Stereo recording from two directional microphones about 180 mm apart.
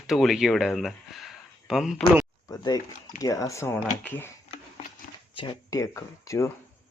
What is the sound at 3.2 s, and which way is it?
Speech, 20° left (ahead or behind).